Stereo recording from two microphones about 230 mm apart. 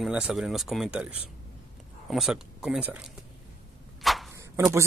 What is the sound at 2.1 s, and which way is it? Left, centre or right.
Speech, centre.